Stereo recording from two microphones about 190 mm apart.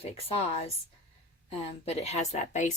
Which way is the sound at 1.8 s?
35° left (ahead or behind).